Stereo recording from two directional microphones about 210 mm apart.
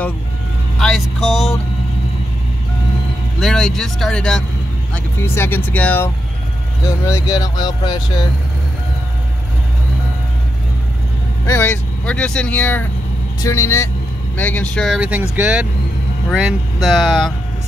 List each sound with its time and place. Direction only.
0.7 s speech: centre (ahead or behind)
3.3 s speech: centre (ahead or behind); by 8.0 s 20° left (ahead or behind)
11.4 s speech: 10° left (ahead or behind)